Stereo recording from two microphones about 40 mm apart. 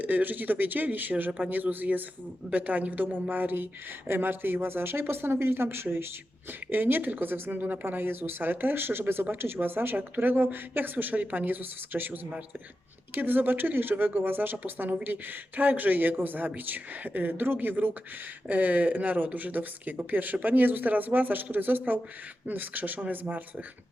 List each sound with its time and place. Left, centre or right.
0.0 s speech: right
6.7 s speech: right
18.4 s speech: right